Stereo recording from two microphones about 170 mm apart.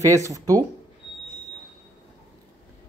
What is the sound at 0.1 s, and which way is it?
Speech, 20° right (ahead or behind).